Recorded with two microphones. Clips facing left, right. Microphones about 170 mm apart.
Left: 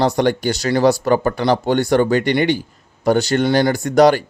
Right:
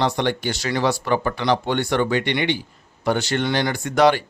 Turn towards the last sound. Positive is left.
turn(degrees=40)  # may be behind; listen again after turning